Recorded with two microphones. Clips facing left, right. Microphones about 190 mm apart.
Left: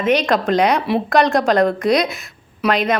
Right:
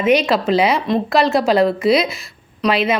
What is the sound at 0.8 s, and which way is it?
Speech, 5° left (ahead or behind).